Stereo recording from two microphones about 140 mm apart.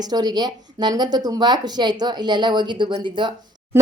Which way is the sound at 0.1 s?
30° right (ahead or behind).